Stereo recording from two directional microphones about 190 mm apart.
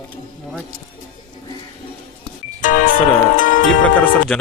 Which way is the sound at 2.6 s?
45° left (ahead or behind).